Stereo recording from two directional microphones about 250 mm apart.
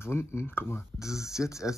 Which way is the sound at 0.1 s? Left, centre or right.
Centre.